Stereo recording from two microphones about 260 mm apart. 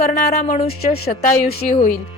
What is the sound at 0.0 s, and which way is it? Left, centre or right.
A woman's voice, left.